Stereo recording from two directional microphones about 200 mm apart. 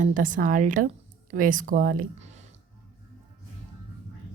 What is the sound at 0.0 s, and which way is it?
A woman's voice, 40° right (ahead or behind).